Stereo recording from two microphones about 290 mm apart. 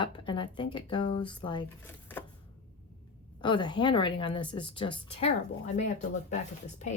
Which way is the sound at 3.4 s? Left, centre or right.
Centre.